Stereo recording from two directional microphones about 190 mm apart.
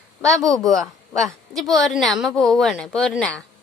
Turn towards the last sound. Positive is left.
turn(degrees=5)  # may be behind; listen again after turning